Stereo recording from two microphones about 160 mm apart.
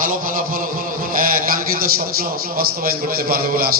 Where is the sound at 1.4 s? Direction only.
60° right (ahead or behind).